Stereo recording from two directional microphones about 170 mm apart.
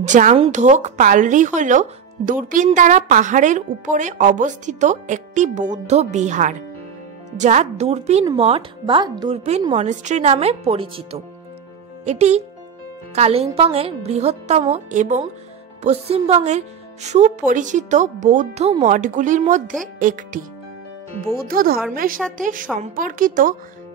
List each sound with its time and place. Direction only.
0.0 s a woman's voice: 45° right (ahead or behind)
9.8 s a woman's voice: 45° right (ahead or behind)
21.5 s a woman's voice: 60° right (ahead or behind)